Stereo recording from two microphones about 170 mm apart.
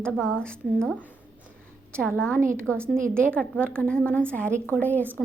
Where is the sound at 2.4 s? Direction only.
15° right (ahead or behind).